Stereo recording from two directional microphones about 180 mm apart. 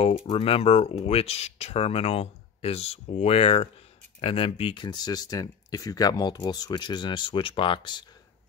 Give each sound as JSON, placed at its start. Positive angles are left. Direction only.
{"t": 0.0, "sound": "speech", "side_deg": 30}